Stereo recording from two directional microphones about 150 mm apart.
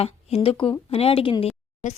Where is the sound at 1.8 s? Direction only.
55° left (ahead or behind).